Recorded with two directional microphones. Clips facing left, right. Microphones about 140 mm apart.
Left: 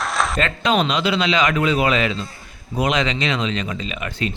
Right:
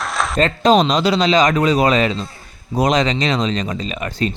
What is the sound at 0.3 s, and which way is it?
Speech, 35° right (ahead or behind).